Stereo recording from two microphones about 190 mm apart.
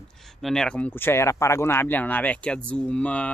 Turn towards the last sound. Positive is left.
turn(degrees=5)  # may be behind; listen again after turning